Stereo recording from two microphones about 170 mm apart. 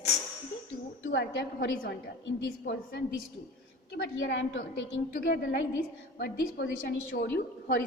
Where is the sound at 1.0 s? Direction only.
90° left.